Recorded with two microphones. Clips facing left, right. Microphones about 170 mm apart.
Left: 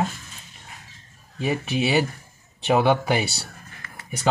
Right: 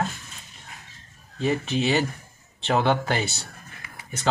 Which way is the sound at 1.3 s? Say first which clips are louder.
Even; 10° left (ahead or behind).